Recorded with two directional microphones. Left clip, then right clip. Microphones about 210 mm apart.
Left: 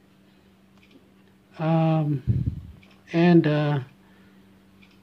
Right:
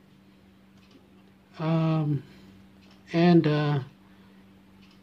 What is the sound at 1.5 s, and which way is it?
Speech, 15° left (ahead or behind).